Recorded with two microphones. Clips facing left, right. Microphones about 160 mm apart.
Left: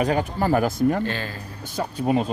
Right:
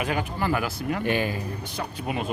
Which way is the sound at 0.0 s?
40° left (ahead or behind).